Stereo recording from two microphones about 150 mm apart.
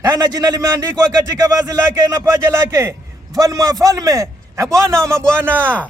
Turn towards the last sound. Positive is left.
turn(degrees=10)  # may be behind; listen again after turning